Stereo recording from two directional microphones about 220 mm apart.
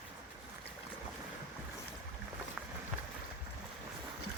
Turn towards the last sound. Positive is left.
turn(degrees=-5)  # may be behind; listen again after turning